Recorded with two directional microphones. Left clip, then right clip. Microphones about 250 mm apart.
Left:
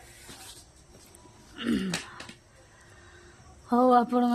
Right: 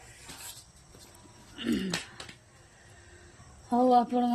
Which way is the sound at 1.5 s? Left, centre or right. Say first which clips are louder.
Left 2 dB; centre.